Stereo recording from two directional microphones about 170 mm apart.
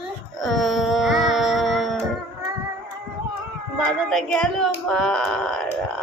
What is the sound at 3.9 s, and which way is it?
Speech, centre (ahead or behind).